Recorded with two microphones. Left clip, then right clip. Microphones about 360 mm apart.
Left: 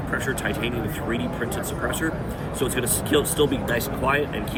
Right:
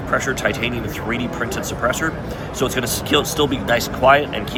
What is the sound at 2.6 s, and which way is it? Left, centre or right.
Speech, centre.